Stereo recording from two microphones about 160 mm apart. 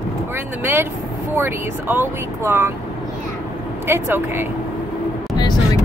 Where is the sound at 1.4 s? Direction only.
15° right (ahead or behind).